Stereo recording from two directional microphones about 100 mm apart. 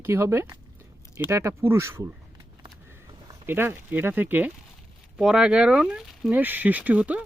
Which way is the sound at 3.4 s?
20° right (ahead or behind).